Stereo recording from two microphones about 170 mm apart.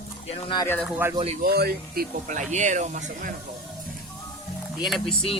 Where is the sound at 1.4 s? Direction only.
65° right (ahead or behind).